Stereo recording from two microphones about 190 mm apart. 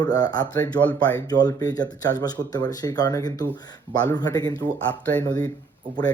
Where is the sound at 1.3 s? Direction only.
20° left (ahead or behind).